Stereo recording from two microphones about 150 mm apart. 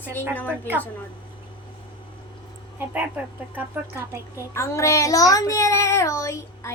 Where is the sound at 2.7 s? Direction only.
10° right (ahead or behind).